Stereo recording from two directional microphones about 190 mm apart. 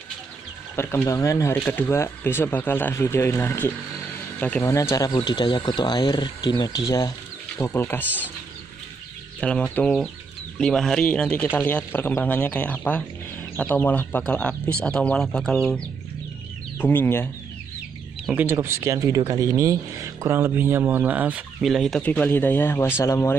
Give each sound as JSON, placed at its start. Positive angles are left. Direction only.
{"t": 0.7, "sound": "speech", "side_deg": 15}
{"t": 9.4, "sound": "speech", "side_deg": 5}
{"t": 18.3, "sound": "speech", "side_deg": -10}